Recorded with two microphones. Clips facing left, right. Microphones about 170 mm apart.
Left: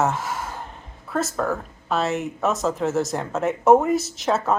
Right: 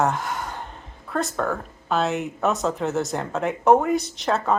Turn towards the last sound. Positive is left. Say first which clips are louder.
# left 1 dB
turn(degrees=0)  # may be behind; listen again after turning